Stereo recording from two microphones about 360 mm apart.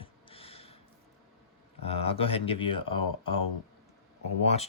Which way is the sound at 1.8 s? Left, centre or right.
Centre.